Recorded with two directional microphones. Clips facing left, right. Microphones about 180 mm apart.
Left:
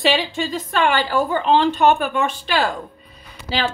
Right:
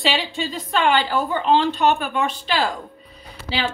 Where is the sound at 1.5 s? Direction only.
50° left (ahead or behind).